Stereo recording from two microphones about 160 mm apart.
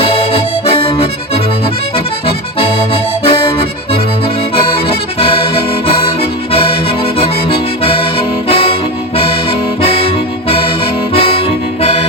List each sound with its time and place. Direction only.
0.0 s accordion: 35° left (ahead or behind)
8.4 s music: 35° left (ahead or behind)
11.1 s music: 35° left (ahead or behind)